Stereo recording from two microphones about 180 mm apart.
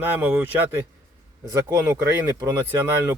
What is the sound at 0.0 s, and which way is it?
Speech, 10° right (ahead or behind).